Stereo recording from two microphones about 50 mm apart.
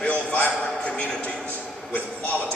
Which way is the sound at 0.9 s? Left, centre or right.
Centre.